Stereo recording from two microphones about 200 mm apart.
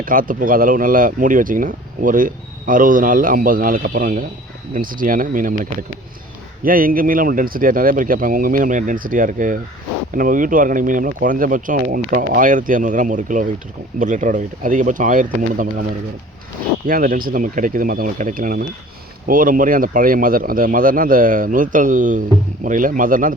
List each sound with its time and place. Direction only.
0.0 s speech: 45° right (ahead or behind)
6.7 s speech: 45° right (ahead or behind)
16.8 s speech: 45° right (ahead or behind)